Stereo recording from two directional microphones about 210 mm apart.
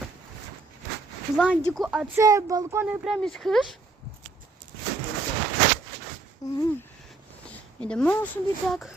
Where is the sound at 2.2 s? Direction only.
15° right (ahead or behind); by 3.8 s centre (ahead or behind).